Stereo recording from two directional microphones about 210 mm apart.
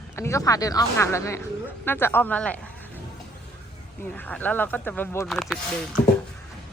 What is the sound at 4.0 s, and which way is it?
A woman's voice, 10° left (ahead or behind).